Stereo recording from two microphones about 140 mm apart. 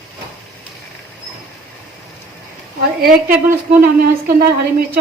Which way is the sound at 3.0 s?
90° right.